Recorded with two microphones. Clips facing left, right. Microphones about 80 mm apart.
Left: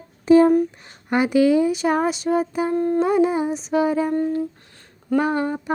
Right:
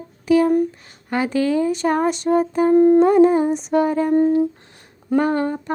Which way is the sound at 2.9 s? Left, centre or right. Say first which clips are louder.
Right 5 dB; centre.